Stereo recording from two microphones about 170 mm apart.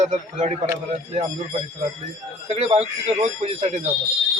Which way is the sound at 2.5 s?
40° right (ahead or behind).